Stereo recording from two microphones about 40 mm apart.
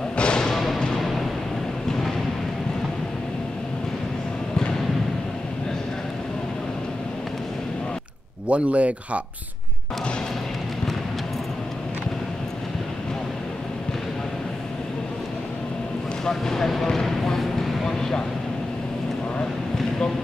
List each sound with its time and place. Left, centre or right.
0.1 s thump: left
0.9 s music: centre
8.5 s speech: right
16.3 s speech: centre
17.8 s vehicle: centre